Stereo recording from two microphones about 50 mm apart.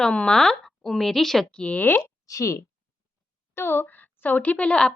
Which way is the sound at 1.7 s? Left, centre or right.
Left.